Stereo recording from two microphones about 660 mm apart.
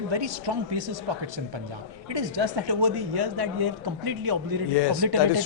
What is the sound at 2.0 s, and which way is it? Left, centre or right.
A man's voice, right.